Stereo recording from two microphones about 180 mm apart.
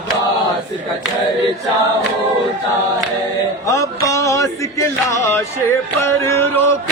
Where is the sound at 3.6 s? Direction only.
20° left (ahead or behind).